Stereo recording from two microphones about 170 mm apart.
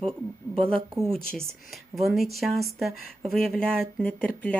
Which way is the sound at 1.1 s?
5° left (ahead or behind).